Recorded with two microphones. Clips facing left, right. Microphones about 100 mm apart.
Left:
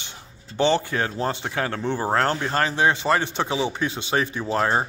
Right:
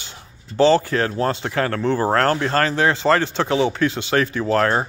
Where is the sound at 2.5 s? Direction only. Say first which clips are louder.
Right 3 dB; 20° left (ahead or behind).